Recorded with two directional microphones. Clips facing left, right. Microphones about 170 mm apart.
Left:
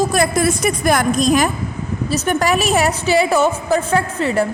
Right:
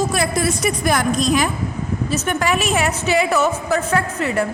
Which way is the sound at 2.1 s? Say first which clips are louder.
Left 4 dB; 35° left (ahead or behind).